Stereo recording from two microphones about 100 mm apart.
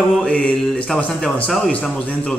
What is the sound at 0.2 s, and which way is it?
A man's voice, 10° left (ahead or behind).